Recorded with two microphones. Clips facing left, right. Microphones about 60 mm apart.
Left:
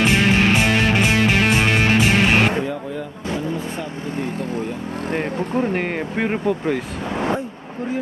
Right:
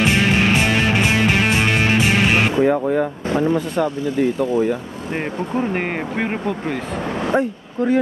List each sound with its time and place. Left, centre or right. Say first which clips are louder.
0.0 s music: even; centre
2.6 s speech: right 10 dB; right
5.6 s speech: even; centre